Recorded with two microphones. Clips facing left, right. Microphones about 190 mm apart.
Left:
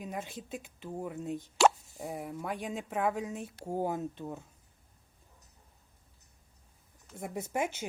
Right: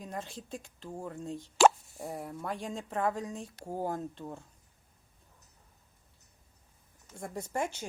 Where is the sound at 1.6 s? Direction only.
50° right (ahead or behind).